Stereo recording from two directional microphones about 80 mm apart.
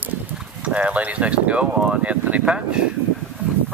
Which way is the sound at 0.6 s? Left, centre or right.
Centre.